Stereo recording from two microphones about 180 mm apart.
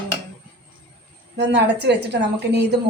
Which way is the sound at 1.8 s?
70° right (ahead or behind).